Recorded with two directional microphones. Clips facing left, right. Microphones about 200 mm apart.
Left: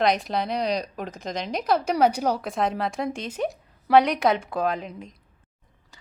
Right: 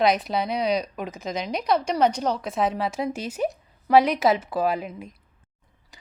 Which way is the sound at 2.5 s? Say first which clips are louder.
Right 1 dB; centre (ahead or behind).